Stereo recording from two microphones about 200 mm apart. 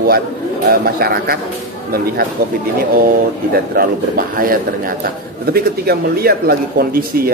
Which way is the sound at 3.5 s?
45° right (ahead or behind).